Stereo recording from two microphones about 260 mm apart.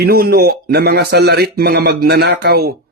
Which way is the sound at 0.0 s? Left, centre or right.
Right.